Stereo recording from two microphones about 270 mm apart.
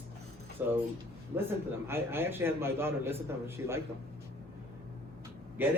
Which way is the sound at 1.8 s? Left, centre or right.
Centre.